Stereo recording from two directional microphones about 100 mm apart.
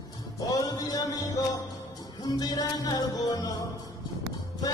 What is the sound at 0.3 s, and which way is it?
Music, 35° left (ahead or behind).